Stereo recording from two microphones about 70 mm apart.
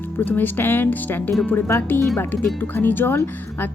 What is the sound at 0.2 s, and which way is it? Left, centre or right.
Speech, left.